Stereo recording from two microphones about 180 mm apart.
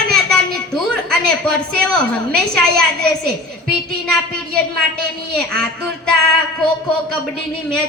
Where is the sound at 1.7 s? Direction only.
5° left (ahead or behind).